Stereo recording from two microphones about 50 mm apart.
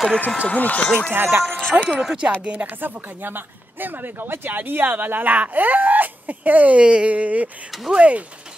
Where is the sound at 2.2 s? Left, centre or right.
Right.